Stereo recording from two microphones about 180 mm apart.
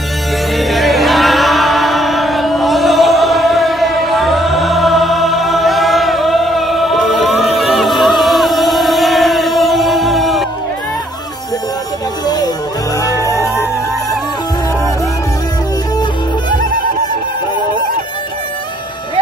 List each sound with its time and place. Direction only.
0.6 s music: centre (ahead or behind)
13.0 s music: 15° left (ahead or behind)